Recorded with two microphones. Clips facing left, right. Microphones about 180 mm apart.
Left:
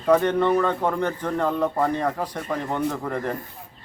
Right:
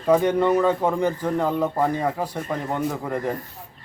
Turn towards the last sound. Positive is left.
turn(degrees=-10)  # may be behind; listen again after turning